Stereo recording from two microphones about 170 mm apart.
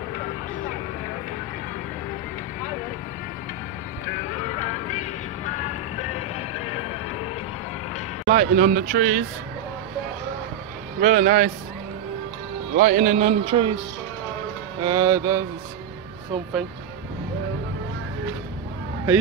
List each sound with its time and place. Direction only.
8.3 s speech: 50° right (ahead or behind)
11.0 s speech: 50° right (ahead or behind)
12.7 s speech: 50° right (ahead or behind)
13.5 s speech: 35° right (ahead or behind)
14.8 s mantra: 20° right (ahead or behind)